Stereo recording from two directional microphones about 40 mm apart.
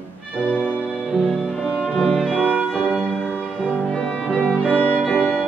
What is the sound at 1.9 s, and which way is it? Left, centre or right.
Music, left.